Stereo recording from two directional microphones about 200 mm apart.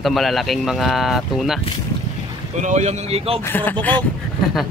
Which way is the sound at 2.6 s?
35° right (ahead or behind).